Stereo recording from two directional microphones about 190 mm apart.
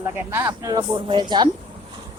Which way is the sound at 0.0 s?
10° right (ahead or behind).